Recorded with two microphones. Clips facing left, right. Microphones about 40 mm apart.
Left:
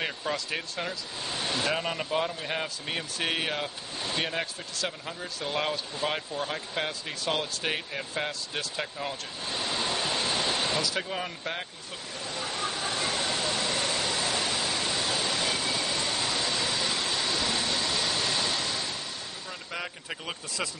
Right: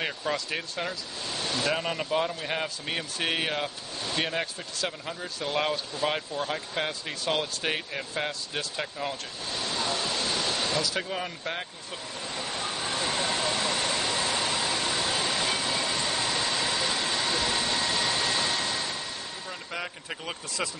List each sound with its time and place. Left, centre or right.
0.0 s speech: centre
1.2 s a sound: centre
1.7 s speech: centre
9.5 s vehicle: centre
10.8 s speech: centre
13.1 s a sound: centre
19.7 s speech: centre